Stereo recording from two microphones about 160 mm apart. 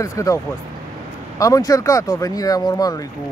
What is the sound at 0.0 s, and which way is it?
Speech, 20° left (ahead or behind).